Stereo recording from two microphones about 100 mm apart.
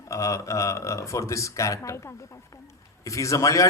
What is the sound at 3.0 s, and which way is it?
Speech, 30° left (ahead or behind).